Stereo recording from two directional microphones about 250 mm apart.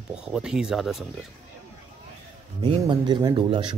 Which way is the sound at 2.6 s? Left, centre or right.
Centre.